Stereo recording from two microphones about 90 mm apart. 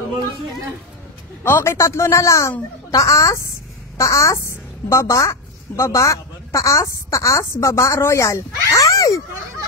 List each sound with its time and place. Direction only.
1.4 s a woman's voice: 25° left (ahead or behind)